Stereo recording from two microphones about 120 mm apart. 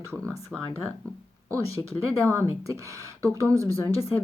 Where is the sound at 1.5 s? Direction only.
25° right (ahead or behind).